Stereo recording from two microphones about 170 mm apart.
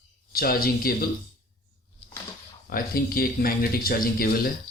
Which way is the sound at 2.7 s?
60° left (ahead or behind).